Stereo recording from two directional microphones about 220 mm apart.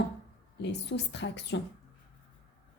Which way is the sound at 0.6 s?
50° left (ahead or behind).